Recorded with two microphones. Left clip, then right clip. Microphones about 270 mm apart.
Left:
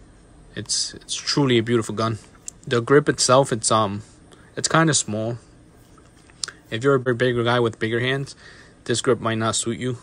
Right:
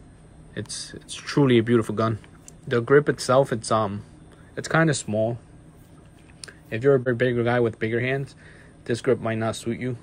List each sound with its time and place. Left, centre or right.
0.6 s speech: centre
6.4 s speech: centre